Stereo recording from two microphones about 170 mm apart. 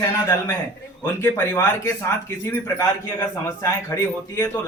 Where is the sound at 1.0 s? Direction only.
15° left (ahead or behind).